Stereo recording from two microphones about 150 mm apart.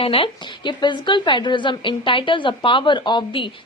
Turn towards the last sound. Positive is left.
turn(degrees=30)  # may be behind; listen again after turning